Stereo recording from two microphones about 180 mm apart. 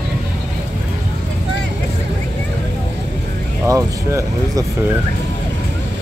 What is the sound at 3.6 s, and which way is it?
Speech, 20° right (ahead or behind).